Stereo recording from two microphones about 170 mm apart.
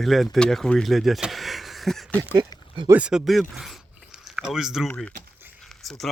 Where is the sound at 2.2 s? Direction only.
20° right (ahead or behind).